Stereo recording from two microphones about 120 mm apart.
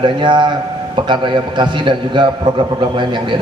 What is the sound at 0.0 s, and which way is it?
A man's voice, 40° right (ahead or behind).